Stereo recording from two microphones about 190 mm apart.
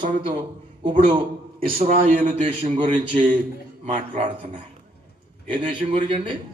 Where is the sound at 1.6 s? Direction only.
45° right (ahead or behind); by 6.3 s 25° right (ahead or behind).